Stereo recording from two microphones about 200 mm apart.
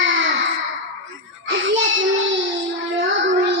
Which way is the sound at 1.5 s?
70° right (ahead or behind).